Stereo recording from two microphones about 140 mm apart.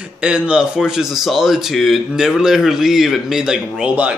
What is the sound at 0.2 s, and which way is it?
Speech, 5° right (ahead or behind).